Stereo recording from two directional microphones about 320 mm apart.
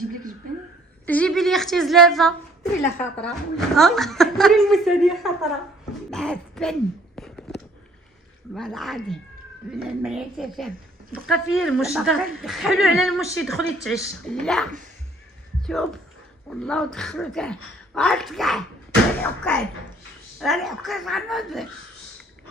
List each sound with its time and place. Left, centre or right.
1.0 s a woman's voice: centre
6.0 s a sound: centre
8.5 s a woman's voice: centre